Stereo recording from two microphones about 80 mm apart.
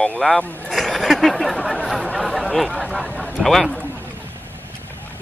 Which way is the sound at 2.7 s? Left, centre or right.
Centre.